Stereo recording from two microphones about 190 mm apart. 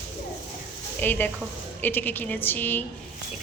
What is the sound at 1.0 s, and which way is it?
A woman's voice, 10° left (ahead or behind).